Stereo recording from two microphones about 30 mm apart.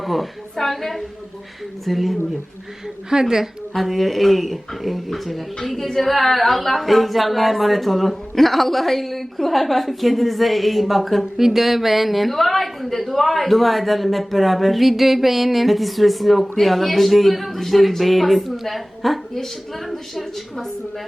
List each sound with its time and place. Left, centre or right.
0.0 s a woman's voice: centre
3.1 s a woman's voice: centre
3.8 s a woman's voice: centre
11.2 s a woman's voice: centre